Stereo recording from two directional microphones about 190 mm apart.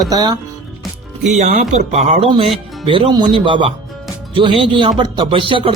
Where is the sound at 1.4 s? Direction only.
40° right (ahead or behind).